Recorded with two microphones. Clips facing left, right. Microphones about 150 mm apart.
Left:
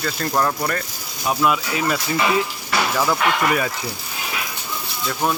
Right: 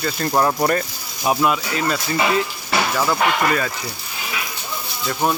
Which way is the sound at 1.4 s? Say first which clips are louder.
Even; 5° left (ahead or behind).